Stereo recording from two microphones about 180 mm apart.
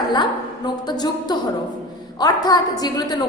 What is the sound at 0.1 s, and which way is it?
A woman's voice, 25° left (ahead or behind).